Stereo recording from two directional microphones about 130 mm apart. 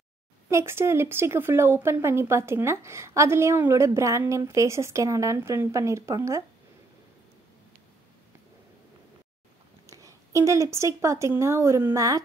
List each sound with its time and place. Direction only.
0.5 s speech: 20° right (ahead or behind)
9.8 s speech: 25° right (ahead or behind)